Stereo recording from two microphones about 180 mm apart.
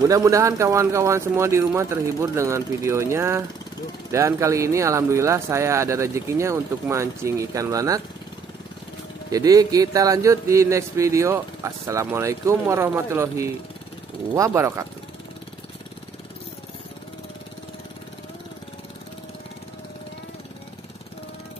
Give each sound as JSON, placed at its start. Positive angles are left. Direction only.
{"t": 0.0, "sound": "speech", "side_deg": -20}
{"t": 9.3, "sound": "speech", "side_deg": -20}